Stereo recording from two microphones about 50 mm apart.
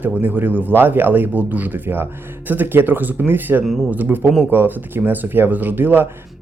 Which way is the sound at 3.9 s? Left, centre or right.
Right.